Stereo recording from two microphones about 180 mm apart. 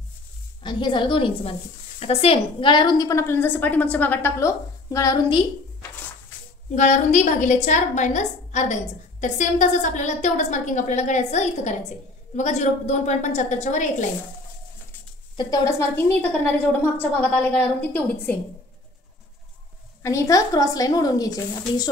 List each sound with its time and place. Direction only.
0.7 s a woman's voice: 25° left (ahead or behind)
6.7 s a woman's voice: 40° left (ahead or behind)
15.3 s a woman's voice: 20° left (ahead or behind)
20.0 s a woman's voice: 15° left (ahead or behind)